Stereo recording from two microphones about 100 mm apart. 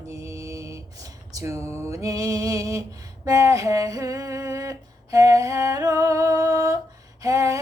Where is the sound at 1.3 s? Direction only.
30° right (ahead or behind).